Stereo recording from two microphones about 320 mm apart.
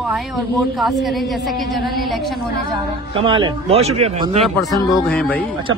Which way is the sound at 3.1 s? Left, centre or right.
Centre.